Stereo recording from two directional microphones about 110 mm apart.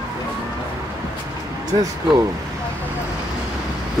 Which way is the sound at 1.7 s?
35° right (ahead or behind).